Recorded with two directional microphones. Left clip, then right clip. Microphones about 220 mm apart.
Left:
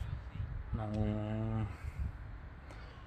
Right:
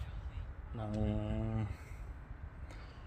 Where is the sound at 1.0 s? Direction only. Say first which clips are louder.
Even; 10° left (ahead or behind).